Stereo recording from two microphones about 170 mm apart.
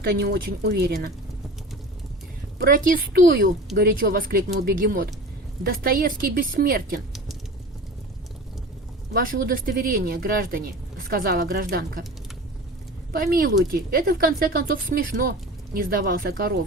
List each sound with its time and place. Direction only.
0.0 s speech: 75° right (ahead or behind)
2.6 s speech: 60° right (ahead or behind)
3.8 s speech: 65° right (ahead or behind)
9.1 s speech: 60° right (ahead or behind)
13.1 s speech: 60° right (ahead or behind)